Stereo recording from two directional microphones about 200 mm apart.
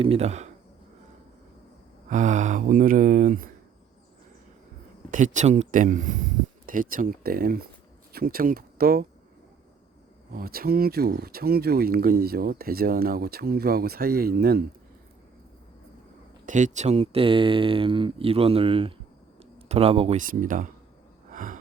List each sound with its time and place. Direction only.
0.0 s speech: 30° right (ahead or behind)
2.0 s speech: 40° right (ahead or behind)
5.1 s speech: 40° right (ahead or behind)
10.3 s speech: 50° right (ahead or behind)
16.5 s speech: 40° right (ahead or behind)
21.3 s a sound: 40° right (ahead or behind)